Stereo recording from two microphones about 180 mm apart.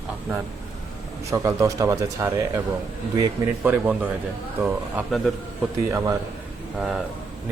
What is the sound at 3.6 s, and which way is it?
Speech, 10° right (ahead or behind).